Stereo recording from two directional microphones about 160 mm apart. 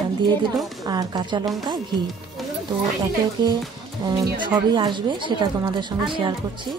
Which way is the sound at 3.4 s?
25° right (ahead or behind).